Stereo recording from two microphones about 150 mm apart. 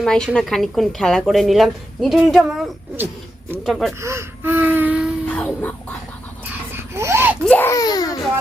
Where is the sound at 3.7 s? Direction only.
Centre (ahead or behind).